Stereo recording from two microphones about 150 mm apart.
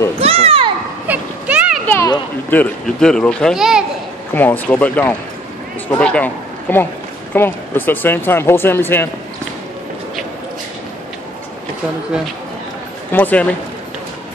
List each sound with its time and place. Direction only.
0.2 s children playing: 40° right (ahead or behind)
1.0 s a sound: 10° right (ahead or behind)
2.5 s speech: 5° left (ahead or behind)
4.3 s a man's voice: 15° left (ahead or behind)
13.1 s speech: 10° left (ahead or behind)